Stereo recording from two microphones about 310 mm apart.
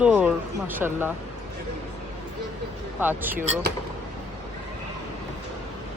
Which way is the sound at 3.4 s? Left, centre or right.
Right.